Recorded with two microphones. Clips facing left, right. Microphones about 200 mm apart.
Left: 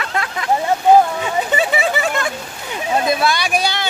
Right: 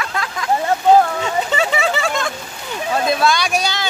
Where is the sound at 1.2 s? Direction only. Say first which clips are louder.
Even; 10° left (ahead or behind).